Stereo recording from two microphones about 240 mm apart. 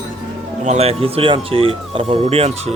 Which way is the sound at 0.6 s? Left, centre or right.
Right.